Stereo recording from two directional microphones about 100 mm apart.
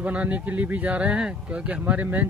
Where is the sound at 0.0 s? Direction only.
15° right (ahead or behind).